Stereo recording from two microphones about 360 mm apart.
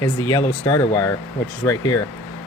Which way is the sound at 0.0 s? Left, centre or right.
Centre.